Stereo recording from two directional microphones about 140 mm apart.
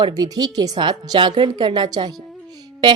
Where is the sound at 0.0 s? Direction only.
30° right (ahead or behind).